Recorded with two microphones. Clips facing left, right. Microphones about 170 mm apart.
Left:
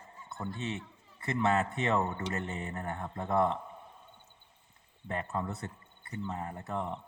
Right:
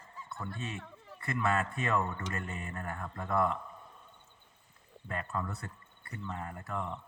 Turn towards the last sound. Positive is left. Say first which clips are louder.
# left 2 dB
turn(degrees=25)  # may be behind; listen again after turning